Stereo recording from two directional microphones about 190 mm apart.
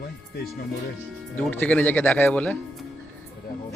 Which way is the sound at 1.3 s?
10° left (ahead or behind).